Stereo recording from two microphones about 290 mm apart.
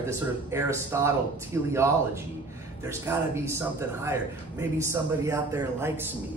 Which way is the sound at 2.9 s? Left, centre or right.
Centre.